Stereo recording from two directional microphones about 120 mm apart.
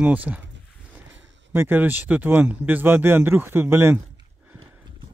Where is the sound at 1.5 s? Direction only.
15° right (ahead or behind).